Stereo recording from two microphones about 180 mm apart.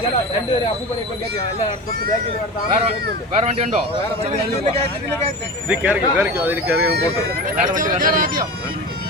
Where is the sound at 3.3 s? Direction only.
40° right (ahead or behind).